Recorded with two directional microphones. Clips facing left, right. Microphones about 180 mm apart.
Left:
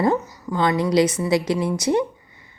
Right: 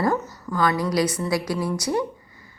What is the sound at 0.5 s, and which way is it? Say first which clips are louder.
A woman's voice: left 4 dB; 25° left (ahead or behind).